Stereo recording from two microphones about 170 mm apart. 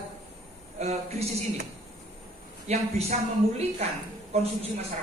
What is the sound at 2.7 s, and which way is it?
A woman's voice, 40° right (ahead or behind).